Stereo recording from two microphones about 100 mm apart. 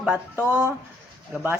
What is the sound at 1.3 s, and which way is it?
Speech, 15° right (ahead or behind).